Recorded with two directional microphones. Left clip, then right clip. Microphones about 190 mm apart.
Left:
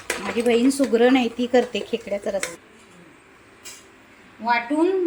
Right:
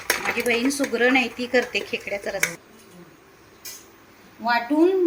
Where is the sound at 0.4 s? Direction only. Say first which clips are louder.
Left 7 dB; 15° left (ahead or behind).